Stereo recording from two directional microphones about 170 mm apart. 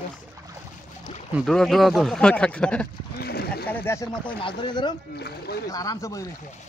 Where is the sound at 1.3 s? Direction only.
Centre (ahead or behind).